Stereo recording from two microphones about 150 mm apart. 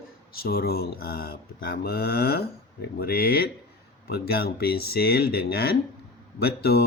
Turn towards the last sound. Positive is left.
turn(degrees=90)